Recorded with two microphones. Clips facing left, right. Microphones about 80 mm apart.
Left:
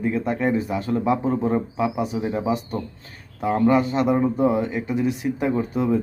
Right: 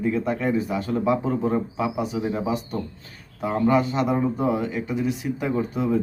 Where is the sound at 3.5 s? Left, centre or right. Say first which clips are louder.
Left 1 dB; left.